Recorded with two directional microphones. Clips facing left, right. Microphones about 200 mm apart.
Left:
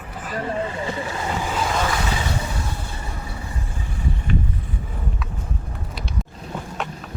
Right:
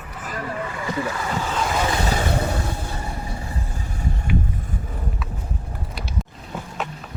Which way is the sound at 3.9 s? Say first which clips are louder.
Left 1 dB; 45° right (ahead or behind).